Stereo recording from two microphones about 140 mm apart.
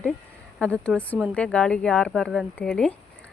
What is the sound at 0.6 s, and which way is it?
A woman's voice, 5° left (ahead or behind).